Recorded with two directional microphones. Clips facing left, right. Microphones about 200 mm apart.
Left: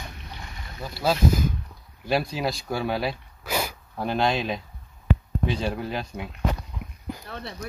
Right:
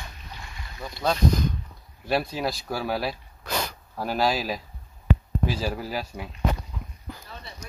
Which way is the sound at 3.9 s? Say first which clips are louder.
Left 1 dB; 5° right (ahead or behind).